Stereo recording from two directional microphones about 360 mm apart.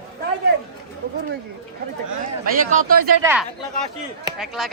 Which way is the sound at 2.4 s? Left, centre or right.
Right.